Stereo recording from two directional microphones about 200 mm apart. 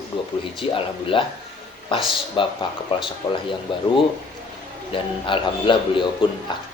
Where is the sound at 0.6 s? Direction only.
25° left (ahead or behind).